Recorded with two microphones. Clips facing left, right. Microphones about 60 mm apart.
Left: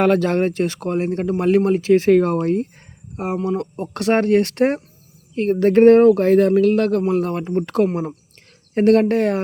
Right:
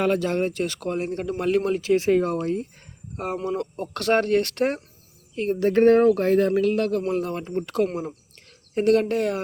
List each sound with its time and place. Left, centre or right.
0.0 s speech: left
2.0 s speech: left
2.3 s speech: left
3.3 s speech: centre
3.6 s speech: left
5.3 s speech: left
5.6 s speech: left
7.1 s speech: left